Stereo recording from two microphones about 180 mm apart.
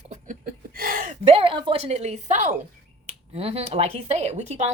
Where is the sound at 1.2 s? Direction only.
30° right (ahead or behind).